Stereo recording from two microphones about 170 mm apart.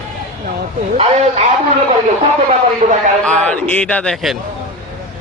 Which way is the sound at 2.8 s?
50° right (ahead or behind).